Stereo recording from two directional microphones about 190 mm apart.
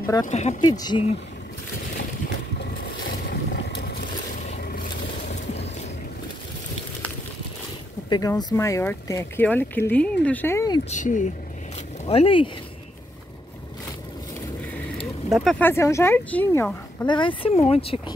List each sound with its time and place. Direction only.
0.0 s speech: 20° left (ahead or behind)
0.3 s speech: 35° left (ahead or behind)
0.7 s speech: 20° left (ahead or behind)
3.3 s boat: 60° left (ahead or behind)
5.3 s a sound: 35° left (ahead or behind)
8.1 s speech: 20° left (ahead or behind)
10.9 s speech: 40° left (ahead or behind)
12.1 s speech: 30° left (ahead or behind)
15.4 s speech: 10° left (ahead or behind)
17.0 s speech: 25° left (ahead or behind)